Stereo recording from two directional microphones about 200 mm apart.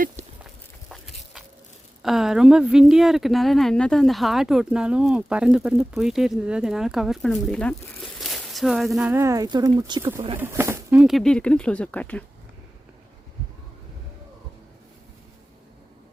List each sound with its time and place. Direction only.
0.4 s walk: centre (ahead or behind)
2.0 s speech: centre (ahead or behind)